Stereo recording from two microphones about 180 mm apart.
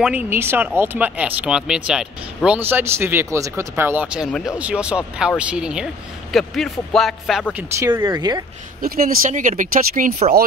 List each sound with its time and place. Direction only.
0.0 s speech: 10° right (ahead or behind)
7.8 s speech: 15° right (ahead or behind)
8.8 s speech: 55° right (ahead or behind)